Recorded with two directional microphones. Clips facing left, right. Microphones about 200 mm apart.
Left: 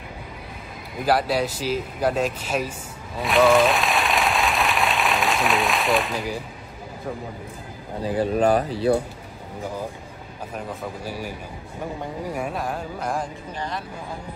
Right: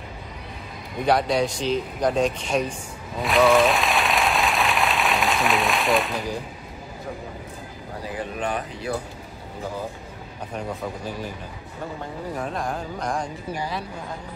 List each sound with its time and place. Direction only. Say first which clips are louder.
0.9 s speech: right 1 dB; 5° left (ahead or behind)
3.2 s a sound: left 1 dB; centre (ahead or behind)
8.0 s speech: left 9 dB; 35° left (ahead or behind)
10.5 s speech: right 2 dB; centre (ahead or behind)